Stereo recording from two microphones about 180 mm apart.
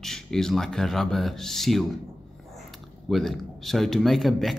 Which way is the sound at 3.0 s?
Centre (ahead or behind).